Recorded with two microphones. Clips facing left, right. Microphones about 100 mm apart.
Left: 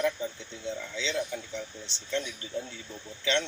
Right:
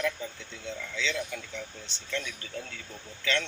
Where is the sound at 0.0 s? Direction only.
30° left (ahead or behind).